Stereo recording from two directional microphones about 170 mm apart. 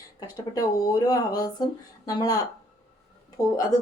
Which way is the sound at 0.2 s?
20° left (ahead or behind).